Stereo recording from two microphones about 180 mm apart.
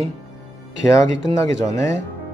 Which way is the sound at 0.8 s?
15° left (ahead or behind).